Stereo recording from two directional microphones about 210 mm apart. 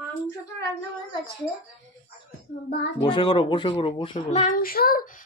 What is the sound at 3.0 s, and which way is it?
Speech, 20° left (ahead or behind).